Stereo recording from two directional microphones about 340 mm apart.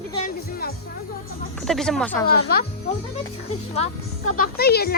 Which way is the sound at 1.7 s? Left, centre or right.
Centre.